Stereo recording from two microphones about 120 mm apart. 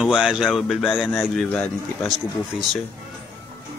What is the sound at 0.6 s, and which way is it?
Speech, 10° left (ahead or behind).